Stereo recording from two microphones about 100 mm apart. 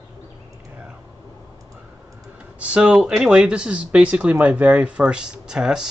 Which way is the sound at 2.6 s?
10° right (ahead or behind).